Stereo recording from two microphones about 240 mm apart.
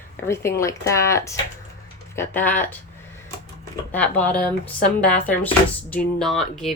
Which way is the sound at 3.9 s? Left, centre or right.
Centre.